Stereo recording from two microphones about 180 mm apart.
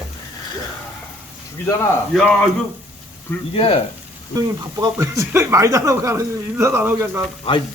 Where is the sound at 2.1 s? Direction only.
5° left (ahead or behind).